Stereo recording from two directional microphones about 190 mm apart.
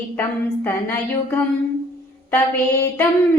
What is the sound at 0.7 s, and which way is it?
A woman's voice, 10° left (ahead or behind).